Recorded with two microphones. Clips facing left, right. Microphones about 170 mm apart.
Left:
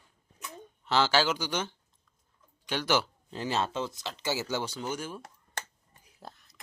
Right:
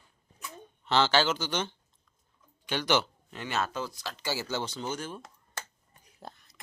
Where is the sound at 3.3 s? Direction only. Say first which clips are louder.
Left 4 dB; 30° left (ahead or behind); by 5.2 s 10° left (ahead or behind).